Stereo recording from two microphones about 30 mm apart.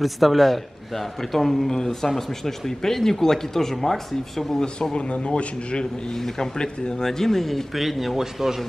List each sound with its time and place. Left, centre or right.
0.0 s a man's voice: centre
1.7 s speech: centre
4.9 s a man's voice: left
6.1 s speech: centre
7.7 s a man's voice: centre